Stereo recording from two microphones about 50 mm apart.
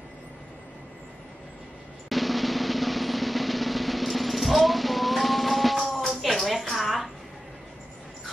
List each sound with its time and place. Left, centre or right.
2.0 s drum: centre